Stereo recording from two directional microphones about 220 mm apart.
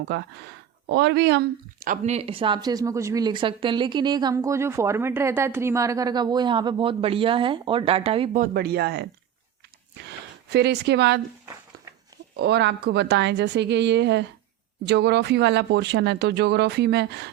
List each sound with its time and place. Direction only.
0.0 s speech: 50° right (ahead or behind)
10.1 s speech: 50° right (ahead or behind)
11.4 s a sound: 15° right (ahead or behind)
12.4 s speech: 50° right (ahead or behind)